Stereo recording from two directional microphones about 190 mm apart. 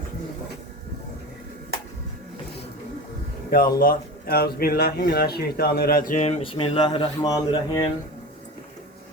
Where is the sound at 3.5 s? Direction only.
50° left (ahead or behind); by 7.9 s 20° left (ahead or behind).